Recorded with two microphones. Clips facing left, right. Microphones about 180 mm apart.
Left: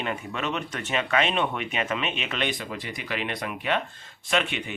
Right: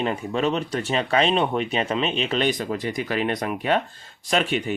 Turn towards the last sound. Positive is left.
turn(degrees=-40)  # may be behind; listen again after turning